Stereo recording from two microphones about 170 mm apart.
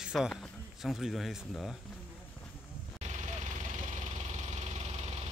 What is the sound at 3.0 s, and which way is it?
Engine, 45° right (ahead or behind).